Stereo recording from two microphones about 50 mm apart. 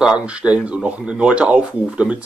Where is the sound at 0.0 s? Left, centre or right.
Right.